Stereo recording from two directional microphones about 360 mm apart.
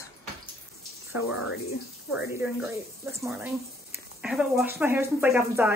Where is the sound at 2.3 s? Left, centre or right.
Centre.